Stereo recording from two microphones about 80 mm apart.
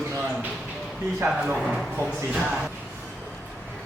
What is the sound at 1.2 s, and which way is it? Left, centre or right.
A man's voice, centre.